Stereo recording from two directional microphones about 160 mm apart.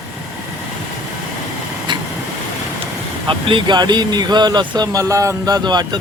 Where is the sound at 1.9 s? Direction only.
30° right (ahead or behind).